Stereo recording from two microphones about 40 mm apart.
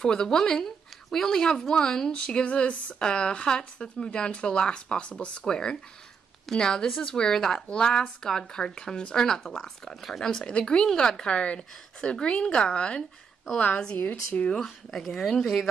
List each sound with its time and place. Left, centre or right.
0.0 s speech: centre
2.4 s speech: left
3.0 s speech: left
11.2 s speech: left
13.9 s speech: left
14.6 s speech: centre